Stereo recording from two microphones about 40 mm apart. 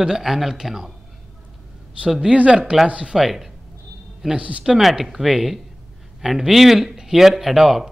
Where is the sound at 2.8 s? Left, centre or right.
Right.